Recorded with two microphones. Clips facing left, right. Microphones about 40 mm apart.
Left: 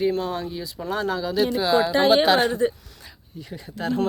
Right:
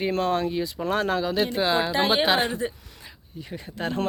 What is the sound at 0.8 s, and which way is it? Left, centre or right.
Speech, right.